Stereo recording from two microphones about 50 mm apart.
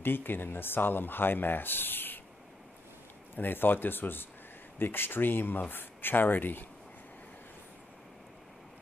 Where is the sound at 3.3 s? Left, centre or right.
Left.